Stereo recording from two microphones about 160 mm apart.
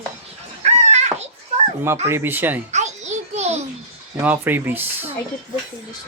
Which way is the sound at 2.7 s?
45° right (ahead or behind).